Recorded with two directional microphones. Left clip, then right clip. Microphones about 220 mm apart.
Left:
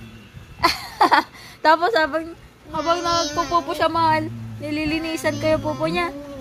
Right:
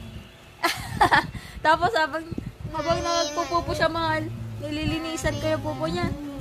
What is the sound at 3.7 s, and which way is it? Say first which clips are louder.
A man's voice: left 7 dB; 20° left (ahead or behind).